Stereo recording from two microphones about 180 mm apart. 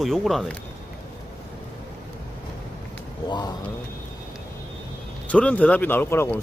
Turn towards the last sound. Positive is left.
turn(degrees=15)  # may be behind; listen again after turning